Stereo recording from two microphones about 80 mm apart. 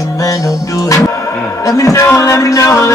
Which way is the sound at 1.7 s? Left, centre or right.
Left.